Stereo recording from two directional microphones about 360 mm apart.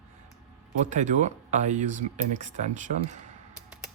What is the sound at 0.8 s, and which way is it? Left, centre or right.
Speech, centre.